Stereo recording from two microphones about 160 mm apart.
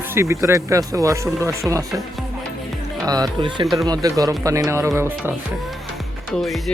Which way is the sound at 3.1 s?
25° right (ahead or behind).